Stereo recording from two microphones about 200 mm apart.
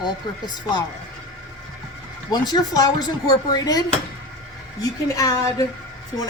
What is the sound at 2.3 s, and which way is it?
A woman's voice, 20° left (ahead or behind).